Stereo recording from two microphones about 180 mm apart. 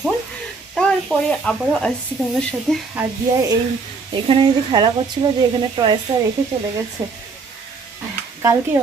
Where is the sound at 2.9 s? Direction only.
15° right (ahead or behind).